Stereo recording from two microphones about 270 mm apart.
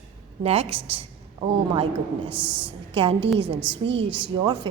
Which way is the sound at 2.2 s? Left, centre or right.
Centre.